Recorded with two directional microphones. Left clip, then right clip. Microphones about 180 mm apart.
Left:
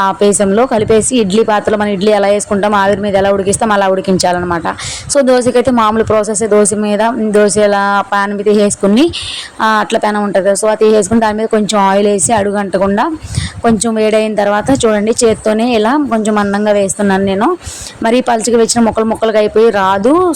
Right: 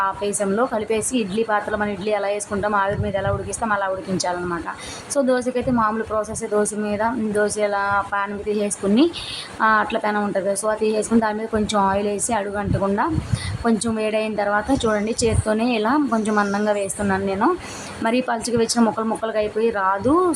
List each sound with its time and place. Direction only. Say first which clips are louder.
0.0 s a woman's voice: left 12 dB; 40° left (ahead or behind)